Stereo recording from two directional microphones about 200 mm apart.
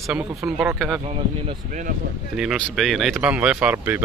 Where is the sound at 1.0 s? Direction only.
30° right (ahead or behind).